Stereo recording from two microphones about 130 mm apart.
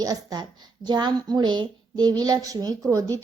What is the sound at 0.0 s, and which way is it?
Speech, 30° right (ahead or behind).